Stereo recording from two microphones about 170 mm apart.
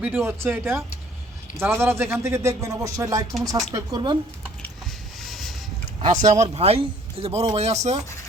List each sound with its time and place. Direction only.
0.0 s speech: 10° right (ahead or behind)
5.3 s vehicle: centre (ahead or behind)
6.0 s speech: 45° right (ahead or behind)